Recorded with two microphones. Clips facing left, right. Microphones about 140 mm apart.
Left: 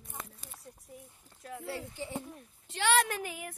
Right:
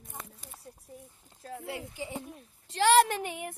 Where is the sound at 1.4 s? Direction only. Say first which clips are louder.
Right 2 dB; 35° right (ahead or behind).